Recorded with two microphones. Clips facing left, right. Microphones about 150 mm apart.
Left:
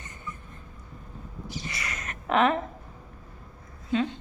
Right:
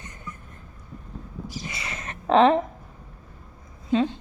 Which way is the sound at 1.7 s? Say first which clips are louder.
Right 1 dB; 25° right (ahead or behind).